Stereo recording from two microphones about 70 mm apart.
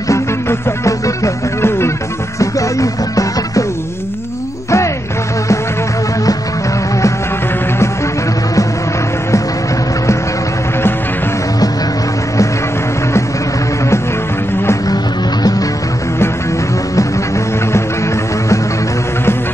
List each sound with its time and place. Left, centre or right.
0.1 s music: left
2.3 s music: left
4.6 s music: left